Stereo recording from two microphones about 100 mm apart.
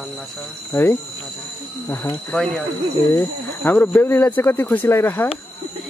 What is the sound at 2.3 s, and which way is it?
Speech, 5° left (ahead or behind).